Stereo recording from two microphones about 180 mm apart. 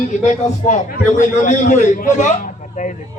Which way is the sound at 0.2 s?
45° left (ahead or behind).